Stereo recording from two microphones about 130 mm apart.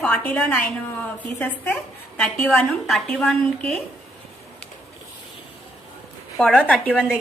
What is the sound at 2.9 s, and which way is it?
Speech, 5° left (ahead or behind).